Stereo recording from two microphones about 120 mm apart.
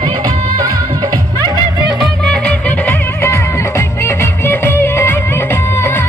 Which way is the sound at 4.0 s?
20° left (ahead or behind).